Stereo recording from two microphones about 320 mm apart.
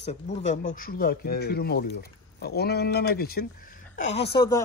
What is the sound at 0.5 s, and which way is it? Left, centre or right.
Speech, left.